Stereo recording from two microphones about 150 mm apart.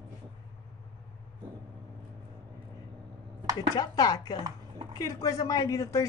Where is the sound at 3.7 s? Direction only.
25° left (ahead or behind).